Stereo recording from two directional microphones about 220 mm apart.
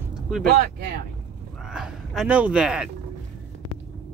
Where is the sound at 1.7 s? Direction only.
Centre (ahead or behind).